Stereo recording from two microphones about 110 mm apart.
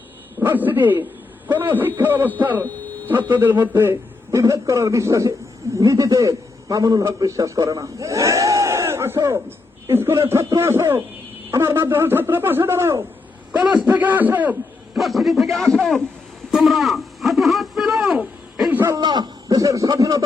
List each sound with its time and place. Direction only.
0.3 s a man's voice: 20° right (ahead or behind)
14.9 s a man's voice: centre (ahead or behind)
16.5 s a sound: centre (ahead or behind)
18.9 s a man's voice: 40° right (ahead or behind)